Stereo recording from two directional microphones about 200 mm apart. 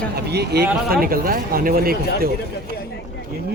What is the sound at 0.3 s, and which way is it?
Speech, 55° right (ahead or behind).